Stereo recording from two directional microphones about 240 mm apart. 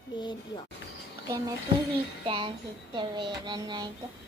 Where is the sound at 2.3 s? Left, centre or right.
Right.